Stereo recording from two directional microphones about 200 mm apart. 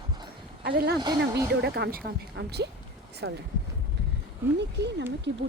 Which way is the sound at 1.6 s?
50° right (ahead or behind).